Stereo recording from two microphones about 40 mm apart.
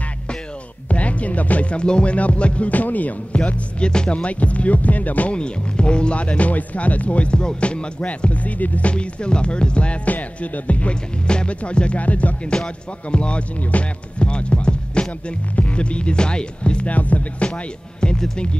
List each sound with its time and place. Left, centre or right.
0.8 s music: left
3.3 s music: left
5.3 s speech: left
10.1 s music: left
11.2 s speech: left
12.0 s music: left
12.5 s speech: left
13.6 s music: left
14.2 s music: left
15.5 s speech: left
16.9 s music: left
18.1 s speech: centre